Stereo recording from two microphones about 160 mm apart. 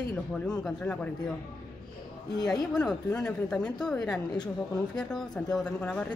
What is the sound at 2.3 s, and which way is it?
Speech, 25° left (ahead or behind).